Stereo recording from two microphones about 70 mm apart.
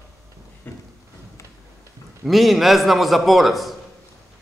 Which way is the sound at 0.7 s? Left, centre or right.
Left.